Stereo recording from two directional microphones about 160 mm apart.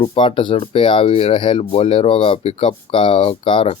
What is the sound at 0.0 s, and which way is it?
Speech, 35° left (ahead or behind).